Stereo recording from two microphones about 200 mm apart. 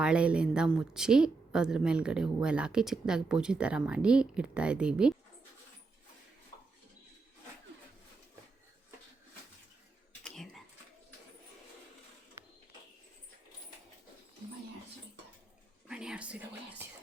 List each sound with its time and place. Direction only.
0.0 s a woman's voice: 5° right (ahead or behind)
10.2 s a sound: centre (ahead or behind)
15.9 s whispering: 5° right (ahead or behind)